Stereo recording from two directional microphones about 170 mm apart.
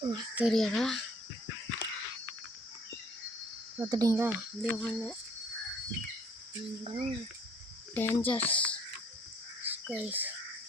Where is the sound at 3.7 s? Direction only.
20° right (ahead or behind).